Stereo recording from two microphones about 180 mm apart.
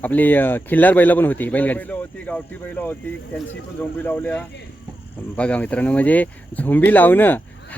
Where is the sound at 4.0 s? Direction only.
10° left (ahead or behind).